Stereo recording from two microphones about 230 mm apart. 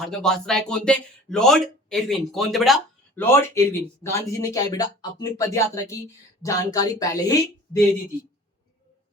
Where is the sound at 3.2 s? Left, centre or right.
Centre.